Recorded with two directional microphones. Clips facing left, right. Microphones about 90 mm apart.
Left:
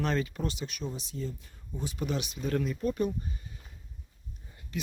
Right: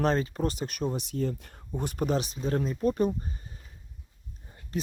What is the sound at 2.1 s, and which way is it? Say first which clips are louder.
Speech: right 2 dB; 35° right (ahead or behind).